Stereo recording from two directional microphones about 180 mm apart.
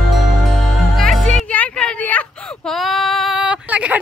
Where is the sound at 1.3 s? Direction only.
10° left (ahead or behind).